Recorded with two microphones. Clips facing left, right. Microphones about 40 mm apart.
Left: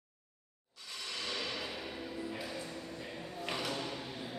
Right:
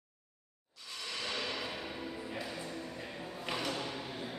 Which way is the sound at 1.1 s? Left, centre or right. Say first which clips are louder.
Right 1 dB; centre.